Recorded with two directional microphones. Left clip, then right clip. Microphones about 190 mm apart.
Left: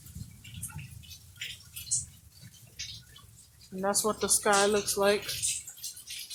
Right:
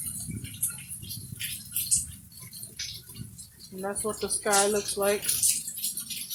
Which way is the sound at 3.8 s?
20° left (ahead or behind).